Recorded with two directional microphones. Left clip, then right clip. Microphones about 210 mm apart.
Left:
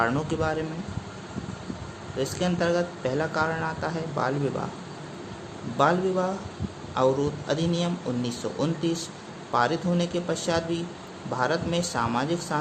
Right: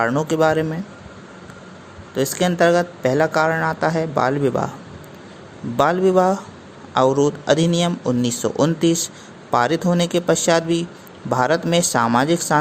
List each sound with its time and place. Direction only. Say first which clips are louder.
0.0 s speech: right 8 dB; 30° right (ahead or behind)
2.1 s speech: right 9 dB; 30° right (ahead or behind)
5.7 s speech: right 7 dB; 35° right (ahead or behind)